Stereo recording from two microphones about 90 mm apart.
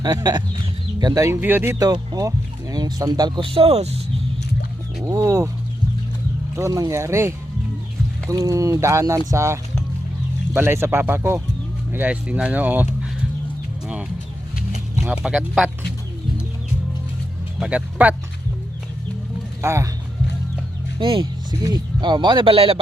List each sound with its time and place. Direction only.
0.0 s speech: 50° right (ahead or behind)
1.3 s speech: 20° right (ahead or behind)
1.8 s speech: 45° right (ahead or behind)
3.4 s speech: 80° right
5.1 s speech: 40° right (ahead or behind)
6.6 s speech: 40° right (ahead or behind)
8.3 s speech: 40° right (ahead or behind)
11.9 s speech: 20° right (ahead or behind)
15.0 s speech: 10° right (ahead or behind)
17.7 s speech: 15° right (ahead or behind)
19.6 s speech: 30° right (ahead or behind)
21.0 s speech: 65° right (ahead or behind)
21.6 s speech: 50° right (ahead or behind); by 22.8 s 90° right